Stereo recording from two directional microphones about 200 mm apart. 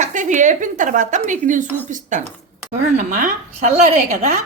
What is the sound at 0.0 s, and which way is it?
Speech, 40° right (ahead or behind).